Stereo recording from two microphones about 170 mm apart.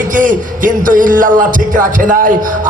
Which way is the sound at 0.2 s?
50° right (ahead or behind).